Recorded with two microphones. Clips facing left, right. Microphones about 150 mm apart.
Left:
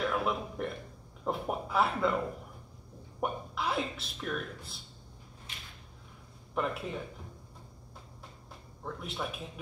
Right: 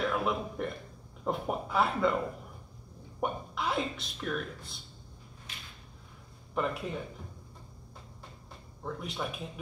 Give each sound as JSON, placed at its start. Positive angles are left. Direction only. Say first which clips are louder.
{"t": 0.0, "sound": "speech", "louder": "right 1 dB", "side_deg": 0}
{"t": 3.2, "sound": "speech", "louder": "right 1 dB", "side_deg": 0}
{"t": 6.5, "sound": "speech", "louder": "right 1 dB", "side_deg": 0}
{"t": 8.8, "sound": "speech", "louder": "right 1 dB", "side_deg": 0}